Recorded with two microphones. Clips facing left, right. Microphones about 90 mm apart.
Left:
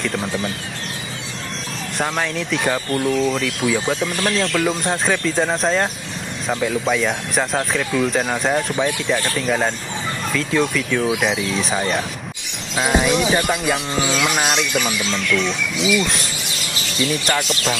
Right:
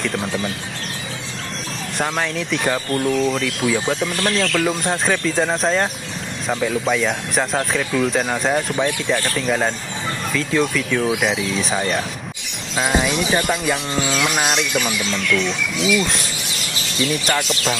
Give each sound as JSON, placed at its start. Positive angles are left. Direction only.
{"t": 0.0, "sound": "speech", "side_deg": 0}
{"t": 2.0, "sound": "speech", "side_deg": 0}
{"t": 4.2, "sound": "speech", "side_deg": 15}
{"t": 4.6, "sound": "speech", "side_deg": 0}